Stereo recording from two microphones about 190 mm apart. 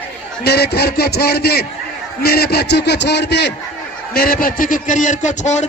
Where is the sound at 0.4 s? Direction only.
60° left (ahead or behind).